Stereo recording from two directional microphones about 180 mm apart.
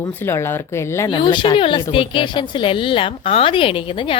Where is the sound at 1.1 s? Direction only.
25° left (ahead or behind).